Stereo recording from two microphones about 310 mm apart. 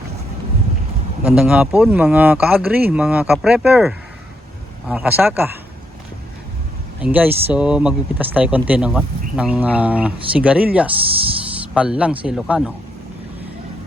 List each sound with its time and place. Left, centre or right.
1.2 s speech: centre
7.0 s speech: centre